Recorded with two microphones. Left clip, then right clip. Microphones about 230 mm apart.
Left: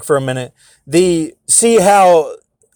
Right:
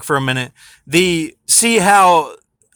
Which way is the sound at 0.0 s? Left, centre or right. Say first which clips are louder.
Left 2 dB; centre.